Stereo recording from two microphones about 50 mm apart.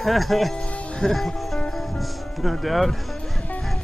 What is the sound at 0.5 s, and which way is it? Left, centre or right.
Music, centre.